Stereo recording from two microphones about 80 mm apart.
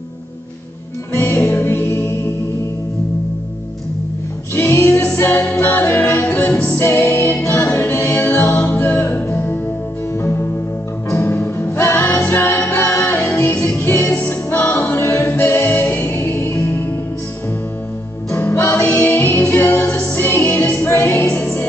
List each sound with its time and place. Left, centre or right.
1.1 s music: left
4.6 s music: left
11.2 s music: left
12.5 s a capella: left
13.4 s music: left
14.5 s choir: left
15.2 s music: left
18.4 s music: left
21.3 s music: centre